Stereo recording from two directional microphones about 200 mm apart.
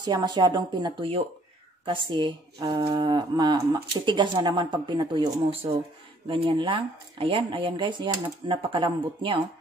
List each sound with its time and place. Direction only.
0.0 s speech: 20° right (ahead or behind)